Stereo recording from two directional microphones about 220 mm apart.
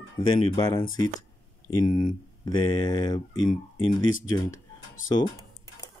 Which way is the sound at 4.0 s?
60° left (ahead or behind).